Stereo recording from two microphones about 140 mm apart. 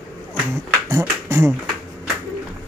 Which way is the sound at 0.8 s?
20° right (ahead or behind).